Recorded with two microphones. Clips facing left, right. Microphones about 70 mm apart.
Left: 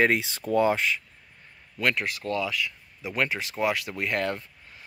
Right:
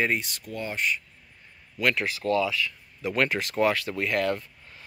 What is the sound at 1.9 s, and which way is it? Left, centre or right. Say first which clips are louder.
Speech: right 4 dB; centre.